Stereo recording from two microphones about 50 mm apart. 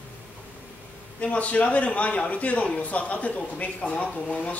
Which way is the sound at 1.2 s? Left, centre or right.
Left.